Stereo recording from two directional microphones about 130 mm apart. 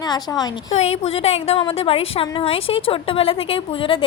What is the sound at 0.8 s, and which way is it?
A woman's voice, 50° left (ahead or behind).